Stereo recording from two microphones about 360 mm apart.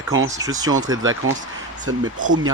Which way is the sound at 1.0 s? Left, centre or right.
Right.